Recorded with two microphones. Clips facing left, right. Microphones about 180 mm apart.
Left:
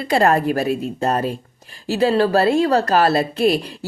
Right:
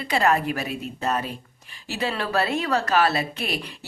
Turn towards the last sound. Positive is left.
turn(degrees=35)  # may be behind; listen again after turning